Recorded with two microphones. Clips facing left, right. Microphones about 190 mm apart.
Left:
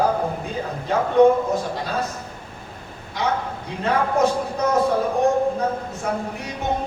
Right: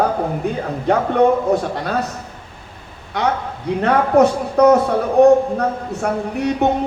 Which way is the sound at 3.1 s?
65° right (ahead or behind).